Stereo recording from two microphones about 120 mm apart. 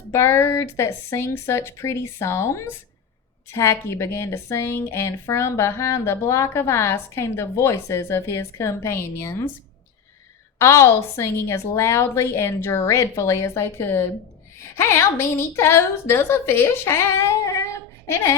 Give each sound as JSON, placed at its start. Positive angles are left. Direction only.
{"t": 0.1, "sound": "a woman's voice", "side_deg": 25}
{"t": 10.6, "sound": "a woman's voice", "side_deg": 25}